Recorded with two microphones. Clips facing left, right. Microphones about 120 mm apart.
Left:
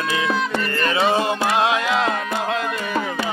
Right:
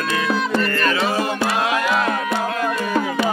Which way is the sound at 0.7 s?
25° left (ahead or behind).